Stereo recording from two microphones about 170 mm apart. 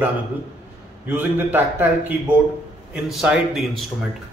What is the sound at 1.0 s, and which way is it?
A man's voice, 10° right (ahead or behind).